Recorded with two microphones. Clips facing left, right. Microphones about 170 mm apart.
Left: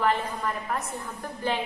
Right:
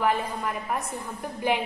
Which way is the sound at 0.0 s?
10° right (ahead or behind).